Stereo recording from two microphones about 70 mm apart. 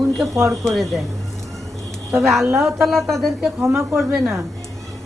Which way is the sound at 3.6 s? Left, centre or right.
Right.